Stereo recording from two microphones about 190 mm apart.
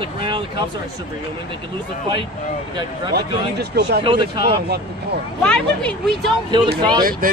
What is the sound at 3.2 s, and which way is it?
Speech, 60° right (ahead or behind).